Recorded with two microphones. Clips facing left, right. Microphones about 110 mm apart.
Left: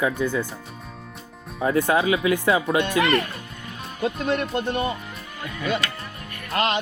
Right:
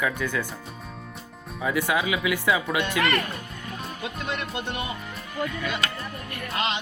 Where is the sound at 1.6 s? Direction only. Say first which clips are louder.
Left 5 dB; 35° left (ahead or behind).